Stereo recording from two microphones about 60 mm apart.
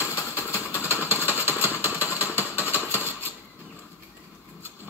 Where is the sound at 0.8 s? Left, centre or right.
Right.